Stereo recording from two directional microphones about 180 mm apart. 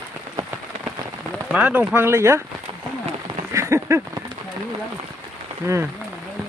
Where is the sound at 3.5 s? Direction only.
15° right (ahead or behind).